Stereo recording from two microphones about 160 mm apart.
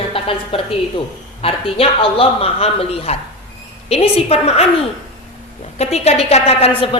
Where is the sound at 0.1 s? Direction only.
35° left (ahead or behind).